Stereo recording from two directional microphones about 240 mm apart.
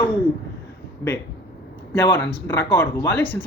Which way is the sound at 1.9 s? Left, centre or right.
Centre.